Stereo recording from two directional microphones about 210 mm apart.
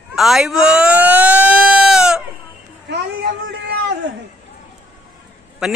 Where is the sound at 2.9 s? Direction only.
50° right (ahead or behind).